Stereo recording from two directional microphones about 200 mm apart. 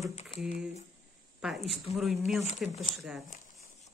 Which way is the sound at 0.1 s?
30° left (ahead or behind).